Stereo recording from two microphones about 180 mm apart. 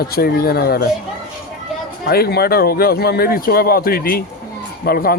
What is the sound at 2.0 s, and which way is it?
Speech, 60° left (ahead or behind).